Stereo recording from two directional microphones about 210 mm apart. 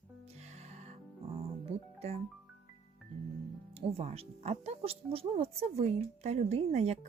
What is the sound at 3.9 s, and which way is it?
Speech, 30° right (ahead or behind).